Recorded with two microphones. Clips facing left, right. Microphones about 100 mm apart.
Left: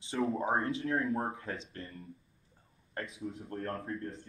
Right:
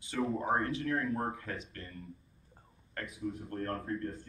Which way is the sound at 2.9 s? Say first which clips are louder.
Right 1 dB; 25° left (ahead or behind).